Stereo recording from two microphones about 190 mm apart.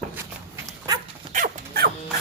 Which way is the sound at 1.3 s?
50° right (ahead or behind).